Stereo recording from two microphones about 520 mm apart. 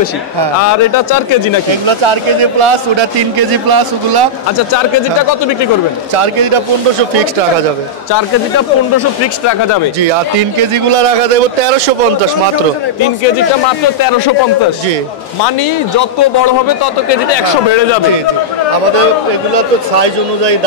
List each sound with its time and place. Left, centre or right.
1.9 s speech: right
3.3 s a man's voice: right
6.1 s speech: right
10.6 s speech: right
16.0 s a man's voice: left
17.1 s speech: left